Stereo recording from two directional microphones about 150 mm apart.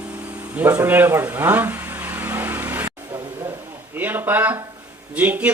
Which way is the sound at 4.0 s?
10° right (ahead or behind).